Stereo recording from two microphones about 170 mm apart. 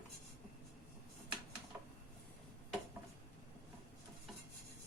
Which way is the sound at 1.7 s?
10° right (ahead or behind).